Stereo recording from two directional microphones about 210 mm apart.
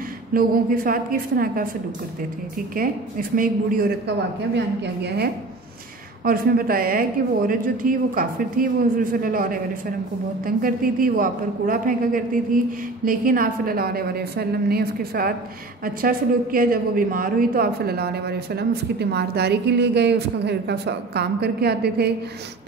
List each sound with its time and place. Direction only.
0.3 s a woman's voice: 40° right (ahead or behind)
4.6 s a woman's voice: 50° right (ahead or behind)